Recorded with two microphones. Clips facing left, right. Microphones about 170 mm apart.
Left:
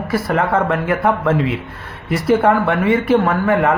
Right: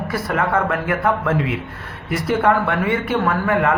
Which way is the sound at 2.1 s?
30° left (ahead or behind).